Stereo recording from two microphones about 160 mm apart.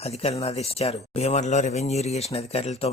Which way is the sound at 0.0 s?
40° left (ahead or behind).